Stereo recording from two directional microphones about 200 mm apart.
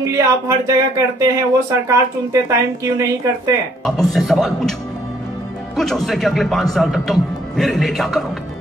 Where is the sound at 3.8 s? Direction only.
Centre (ahead or behind).